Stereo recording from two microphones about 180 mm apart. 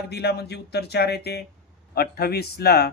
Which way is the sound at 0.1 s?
65° left (ahead or behind).